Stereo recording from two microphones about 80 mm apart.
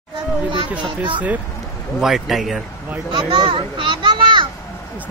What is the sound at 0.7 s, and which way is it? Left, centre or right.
Speech, right.